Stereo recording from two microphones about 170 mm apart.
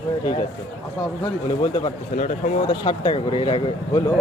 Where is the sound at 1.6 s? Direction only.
30° left (ahead or behind).